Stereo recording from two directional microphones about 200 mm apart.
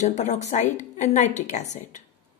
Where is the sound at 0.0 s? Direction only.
35° left (ahead or behind).